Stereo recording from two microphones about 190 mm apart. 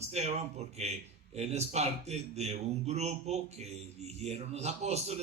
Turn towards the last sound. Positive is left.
turn(degrees=-35)  # may be behind; listen again after turning